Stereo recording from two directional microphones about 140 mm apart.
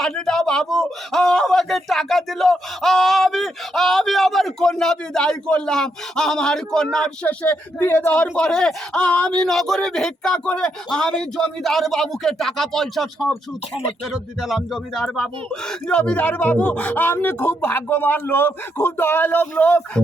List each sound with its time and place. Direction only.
0.0 s speech: 5° left (ahead or behind)